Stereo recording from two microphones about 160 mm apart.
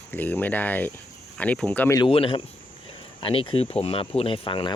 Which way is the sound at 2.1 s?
35° left (ahead or behind).